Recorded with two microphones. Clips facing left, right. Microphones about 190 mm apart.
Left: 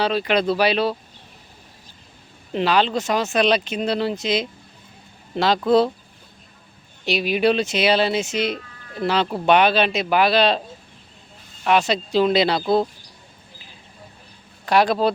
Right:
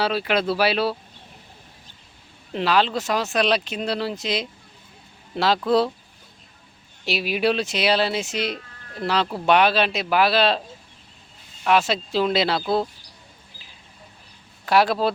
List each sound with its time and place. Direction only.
0.0 s speech: 5° right (ahead or behind)
2.5 s speech: centre (ahead or behind)
7.0 s speech: 5° right (ahead or behind)
11.6 s speech: centre (ahead or behind)
14.6 s speech: centre (ahead or behind)